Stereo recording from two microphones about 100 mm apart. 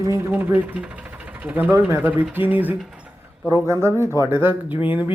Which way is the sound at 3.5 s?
30° right (ahead or behind).